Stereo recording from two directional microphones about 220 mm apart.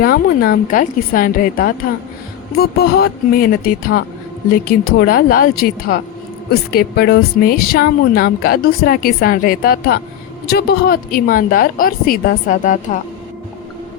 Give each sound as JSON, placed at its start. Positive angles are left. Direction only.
{"t": 0.0, "sound": "a woman's voice", "side_deg": 40}